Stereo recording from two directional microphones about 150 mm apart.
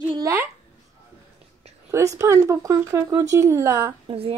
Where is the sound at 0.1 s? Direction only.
20° right (ahead or behind).